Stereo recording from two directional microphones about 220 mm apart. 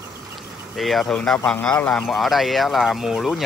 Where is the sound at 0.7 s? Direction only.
Centre (ahead or behind).